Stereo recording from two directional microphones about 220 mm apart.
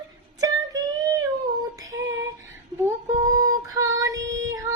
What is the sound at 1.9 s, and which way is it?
Female singing, 60° right (ahead or behind).